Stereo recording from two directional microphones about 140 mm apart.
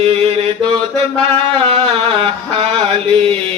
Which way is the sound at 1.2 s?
45° right (ahead or behind).